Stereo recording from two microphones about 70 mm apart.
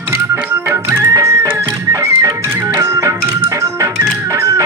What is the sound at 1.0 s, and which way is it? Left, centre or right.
Music, right.